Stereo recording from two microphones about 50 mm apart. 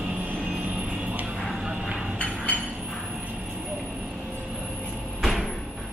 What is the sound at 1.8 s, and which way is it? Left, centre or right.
Train, centre.